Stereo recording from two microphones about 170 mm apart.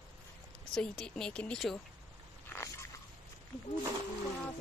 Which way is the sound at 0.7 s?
5° left (ahead or behind).